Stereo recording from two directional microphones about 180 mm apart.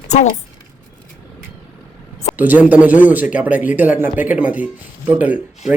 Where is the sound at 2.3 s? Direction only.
10° right (ahead or behind).